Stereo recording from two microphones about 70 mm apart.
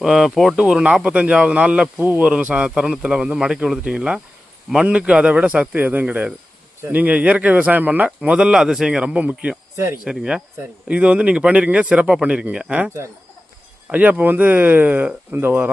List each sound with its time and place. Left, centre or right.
0.0 s speech: centre
0.5 s a man's voice: centre
9.7 s speech: right
10.0 s a man's voice: centre
13.9 s speech: right